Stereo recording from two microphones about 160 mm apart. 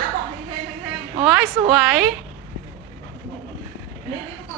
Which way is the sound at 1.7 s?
Centre (ahead or behind).